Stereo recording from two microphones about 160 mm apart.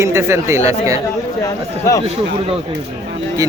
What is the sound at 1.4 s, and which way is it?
Speech, 20° left (ahead or behind).